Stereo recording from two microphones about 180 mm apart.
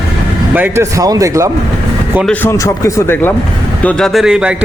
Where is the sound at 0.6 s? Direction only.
20° right (ahead or behind).